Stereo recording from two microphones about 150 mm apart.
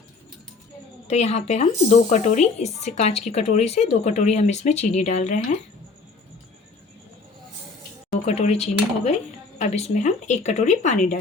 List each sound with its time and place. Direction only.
1.0 s speech: 45° left (ahead or behind)
8.1 s speech: 45° left (ahead or behind)